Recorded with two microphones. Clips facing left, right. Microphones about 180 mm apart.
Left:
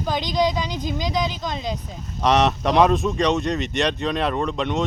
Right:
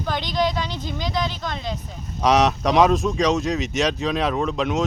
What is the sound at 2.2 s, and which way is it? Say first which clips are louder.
Speech: right 1 dB; centre (ahead or behind).